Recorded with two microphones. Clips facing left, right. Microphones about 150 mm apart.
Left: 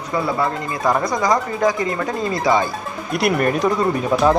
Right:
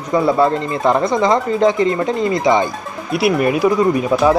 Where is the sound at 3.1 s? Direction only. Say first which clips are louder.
Right 3 dB; 5° right (ahead or behind).